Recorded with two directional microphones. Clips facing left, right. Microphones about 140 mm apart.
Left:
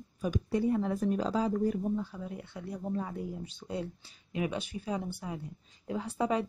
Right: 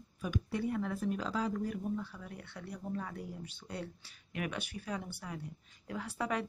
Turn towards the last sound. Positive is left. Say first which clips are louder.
# left 6 dB
turn(degrees=20)  # may be behind; listen again after turning